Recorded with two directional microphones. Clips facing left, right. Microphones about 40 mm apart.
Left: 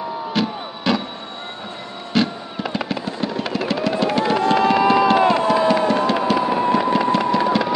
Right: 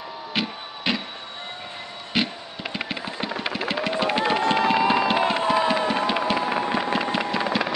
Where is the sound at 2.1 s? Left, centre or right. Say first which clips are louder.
Left 6 dB; centre.